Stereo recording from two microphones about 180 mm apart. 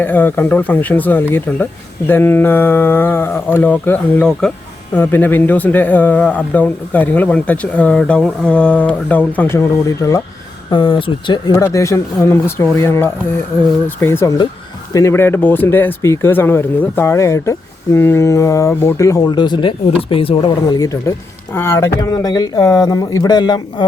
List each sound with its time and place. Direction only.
0.0 s speech: 10° left (ahead or behind)
10.7 s speech: 25° left (ahead or behind)
11.5 s speech: 15° left (ahead or behind); by 20.7 s 30° left (ahead or behind)
20.7 s speech: 20° left (ahead or behind)